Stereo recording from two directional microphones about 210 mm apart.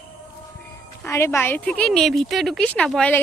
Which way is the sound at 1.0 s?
10° left (ahead or behind).